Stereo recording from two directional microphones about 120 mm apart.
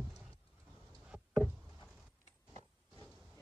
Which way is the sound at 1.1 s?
5° right (ahead or behind).